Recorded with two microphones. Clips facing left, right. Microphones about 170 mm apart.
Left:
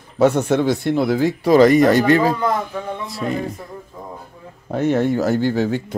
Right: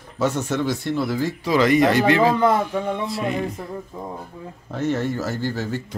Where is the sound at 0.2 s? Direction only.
60° left (ahead or behind); by 2.3 s 40° left (ahead or behind).